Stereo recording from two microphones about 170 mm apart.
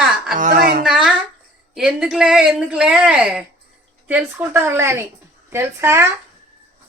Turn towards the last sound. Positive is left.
turn(degrees=-15)  # may be behind; listen again after turning